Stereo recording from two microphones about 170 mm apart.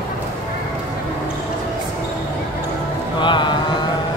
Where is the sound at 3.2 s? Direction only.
25° left (ahead or behind).